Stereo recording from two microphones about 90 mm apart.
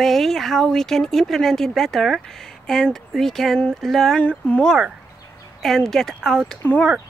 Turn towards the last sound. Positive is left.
turn(degrees=15)  # may be behind; listen again after turning